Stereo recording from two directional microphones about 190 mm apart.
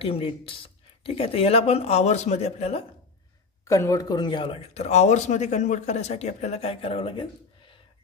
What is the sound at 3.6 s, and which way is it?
Speech, 15° left (ahead or behind).